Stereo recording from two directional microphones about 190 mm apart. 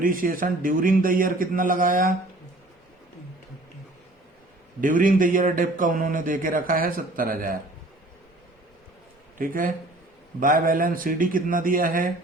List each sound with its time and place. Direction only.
0.0 s speech: 50° right (ahead or behind)
4.8 s speech: 45° right (ahead or behind)
9.4 s speech: 45° right (ahead or behind)